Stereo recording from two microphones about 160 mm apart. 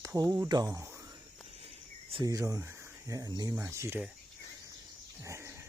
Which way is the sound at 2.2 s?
20° right (ahead or behind).